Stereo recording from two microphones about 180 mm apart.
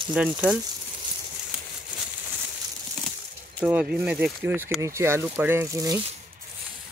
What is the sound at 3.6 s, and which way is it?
Speech, 5° right (ahead or behind).